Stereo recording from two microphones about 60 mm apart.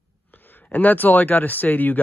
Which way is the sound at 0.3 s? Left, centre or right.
Left.